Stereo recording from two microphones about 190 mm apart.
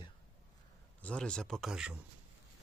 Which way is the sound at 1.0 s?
5° left (ahead or behind).